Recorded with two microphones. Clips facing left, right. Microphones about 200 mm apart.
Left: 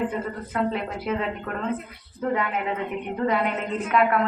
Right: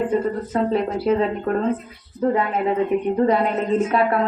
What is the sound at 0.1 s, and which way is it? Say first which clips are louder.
A woman's voice: right 8 dB; 35° right (ahead or behind).